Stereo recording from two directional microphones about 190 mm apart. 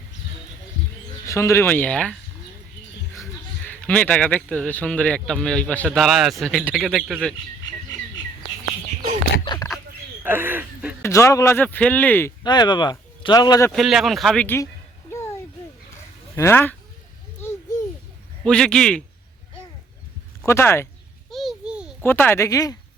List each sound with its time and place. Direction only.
1.3 s speech: 15° left (ahead or behind)
3.7 s speech: 10° left (ahead or behind)
9.4 s a sound: 25° left (ahead or behind)
10.2 s a sound: 10° right (ahead or behind)
11.0 s speech: 15° left (ahead or behind)
12.4 s speech: 25° left (ahead or behind)
13.7 s speech: centre (ahead or behind)
16.3 s speech: 10° left (ahead or behind)
18.4 s speech: 5° left (ahead or behind)
20.4 s speech: 15° left (ahead or behind)
21.2 s a sound: centre (ahead or behind)
22.0 s speech: 10° left (ahead or behind)